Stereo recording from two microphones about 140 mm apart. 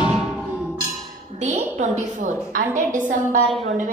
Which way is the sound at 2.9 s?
65° right (ahead or behind).